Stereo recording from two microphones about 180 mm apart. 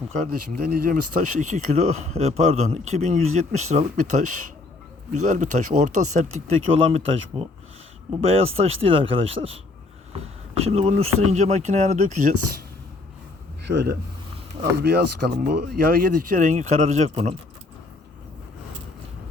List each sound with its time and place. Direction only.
0.3 s speech: 60° right (ahead or behind); by 12.3 s 40° right (ahead or behind)
13.7 s speech: 70° right (ahead or behind); by 17.2 s 40° right (ahead or behind)